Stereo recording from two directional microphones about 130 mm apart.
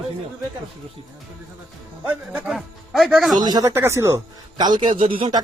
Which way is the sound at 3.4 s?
30° right (ahead or behind).